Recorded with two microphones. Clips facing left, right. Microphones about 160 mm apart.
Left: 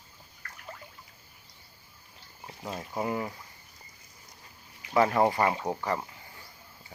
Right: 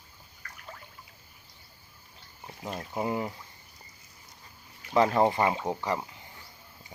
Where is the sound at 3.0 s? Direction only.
20° right (ahead or behind).